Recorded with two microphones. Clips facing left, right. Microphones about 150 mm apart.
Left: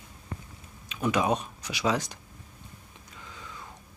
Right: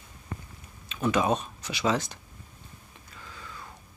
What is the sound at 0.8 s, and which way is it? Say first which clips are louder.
Speech: right 1 dB; 10° left (ahead or behind).